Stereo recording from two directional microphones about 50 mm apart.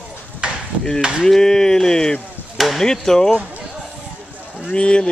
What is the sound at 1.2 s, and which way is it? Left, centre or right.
Speech, centre.